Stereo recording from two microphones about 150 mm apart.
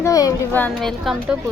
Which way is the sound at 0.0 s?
20° left (ahead or behind).